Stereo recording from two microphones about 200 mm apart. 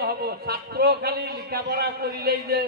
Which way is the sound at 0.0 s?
50° right (ahead or behind).